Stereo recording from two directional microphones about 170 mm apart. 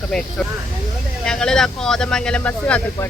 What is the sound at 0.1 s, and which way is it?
Speech, 5° left (ahead or behind).